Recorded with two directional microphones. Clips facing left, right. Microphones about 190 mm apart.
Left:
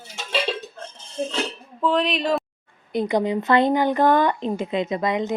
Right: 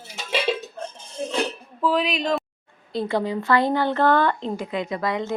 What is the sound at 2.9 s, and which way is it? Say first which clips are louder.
Speech: left 3 dB; 20° left (ahead or behind).